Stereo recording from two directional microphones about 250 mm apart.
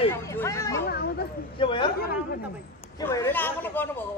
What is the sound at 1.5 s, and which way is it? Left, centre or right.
Speech, centre.